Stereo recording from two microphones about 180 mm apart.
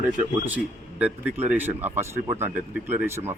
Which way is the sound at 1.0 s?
10° right (ahead or behind).